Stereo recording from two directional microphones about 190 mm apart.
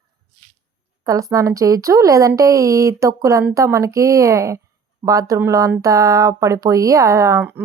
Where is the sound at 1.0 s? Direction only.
15° right (ahead or behind).